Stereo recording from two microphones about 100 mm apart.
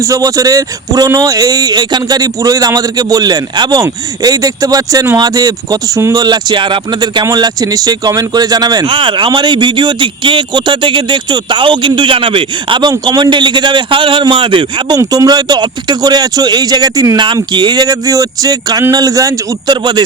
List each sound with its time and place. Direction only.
0.0 s speech: 35° right (ahead or behind)
6.2 s speech: 45° right (ahead or behind)
7.3 s speech: 40° right (ahead or behind)
8.9 s speech: 55° right (ahead or behind)
12.9 s speech: 40° right (ahead or behind)
14.9 s speech: 40° right (ahead or behind)
19.7 s speech: 45° right (ahead or behind)